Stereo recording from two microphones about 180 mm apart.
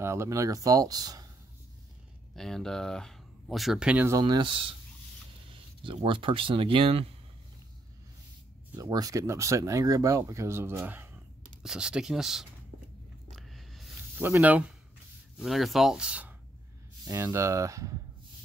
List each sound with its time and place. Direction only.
0.0 s speech: 15° right (ahead or behind)
2.3 s speech: centre (ahead or behind)
4.2 s speech: 25° right (ahead or behind)
5.9 s speech: 30° right (ahead or behind)
8.7 s speech: 20° right (ahead or behind); by 12.4 s centre (ahead or behind)
13.3 s a sound: centre (ahead or behind)
14.1 s speech: 10° right (ahead or behind)
17.0 s speech: 15° right (ahead or behind)